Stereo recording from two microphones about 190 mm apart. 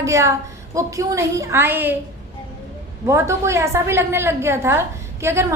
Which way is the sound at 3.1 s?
15° right (ahead or behind).